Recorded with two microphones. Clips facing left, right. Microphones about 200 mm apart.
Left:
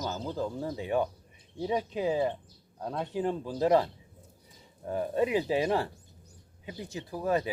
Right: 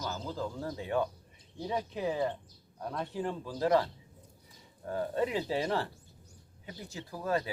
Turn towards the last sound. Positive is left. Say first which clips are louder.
# left 4 dB
turn(degrees=20)  # may be behind; listen again after turning